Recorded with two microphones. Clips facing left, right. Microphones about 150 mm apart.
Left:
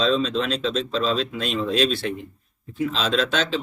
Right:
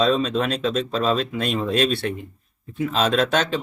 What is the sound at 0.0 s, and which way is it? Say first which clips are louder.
Speech: right 2 dB; 50° right (ahead or behind).